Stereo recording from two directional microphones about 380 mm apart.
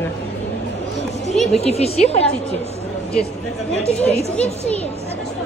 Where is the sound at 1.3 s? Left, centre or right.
Centre.